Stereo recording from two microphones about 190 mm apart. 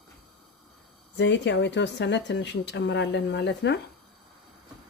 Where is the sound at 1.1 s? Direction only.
65° left (ahead or behind).